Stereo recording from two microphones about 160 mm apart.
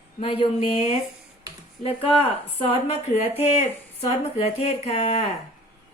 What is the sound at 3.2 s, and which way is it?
Speech, 15° right (ahead or behind).